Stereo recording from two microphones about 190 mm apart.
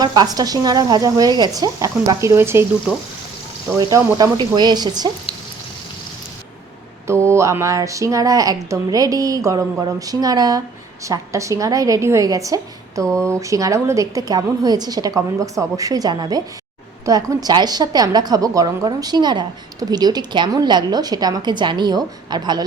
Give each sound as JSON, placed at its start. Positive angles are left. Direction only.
{"t": 0.0, "sound": "a woman's voice", "side_deg": -20}
{"t": 3.8, "sound": "a woman's voice", "side_deg": -20}
{"t": 7.1, "sound": "a woman's voice", "side_deg": -15}